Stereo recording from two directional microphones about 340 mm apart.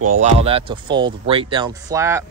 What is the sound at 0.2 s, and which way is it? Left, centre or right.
Speech, centre.